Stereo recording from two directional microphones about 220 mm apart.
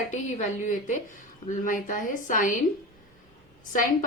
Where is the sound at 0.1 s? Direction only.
35° left (ahead or behind).